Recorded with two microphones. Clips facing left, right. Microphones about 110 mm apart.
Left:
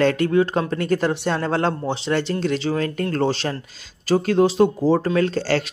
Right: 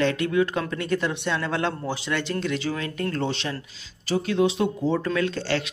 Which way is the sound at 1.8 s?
25° left (ahead or behind).